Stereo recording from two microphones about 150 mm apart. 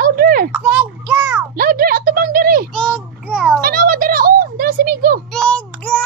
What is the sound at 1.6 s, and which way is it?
A woman's voice, 75° right (ahead or behind).